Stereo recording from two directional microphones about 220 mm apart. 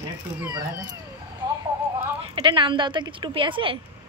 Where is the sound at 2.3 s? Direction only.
20° right (ahead or behind).